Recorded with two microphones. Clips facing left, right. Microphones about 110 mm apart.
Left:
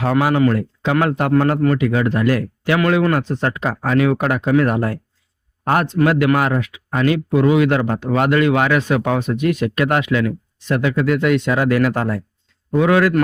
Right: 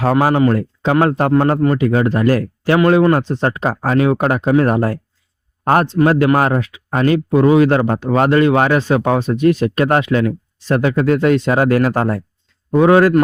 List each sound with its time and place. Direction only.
0.0 s speech: 40° right (ahead or behind)